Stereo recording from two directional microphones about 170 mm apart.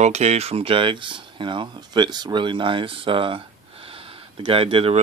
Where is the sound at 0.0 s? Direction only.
40° right (ahead or behind).